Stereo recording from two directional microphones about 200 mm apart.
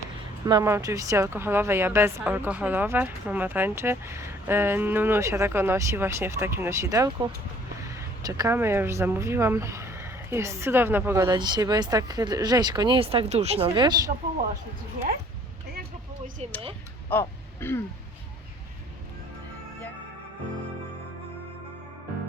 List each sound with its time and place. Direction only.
0.4 s speech: 15° right (ahead or behind)
16.4 s speech: 30° right (ahead or behind)
17.1 s throat clearing: 10° left (ahead or behind)